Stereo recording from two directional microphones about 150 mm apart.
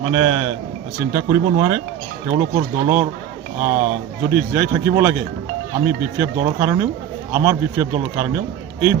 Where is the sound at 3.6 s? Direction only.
15° right (ahead or behind).